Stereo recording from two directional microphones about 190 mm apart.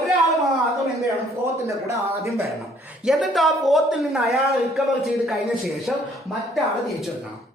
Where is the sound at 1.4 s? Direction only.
15° right (ahead or behind).